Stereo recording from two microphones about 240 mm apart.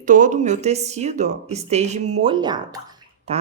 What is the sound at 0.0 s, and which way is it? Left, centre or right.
Speech, right.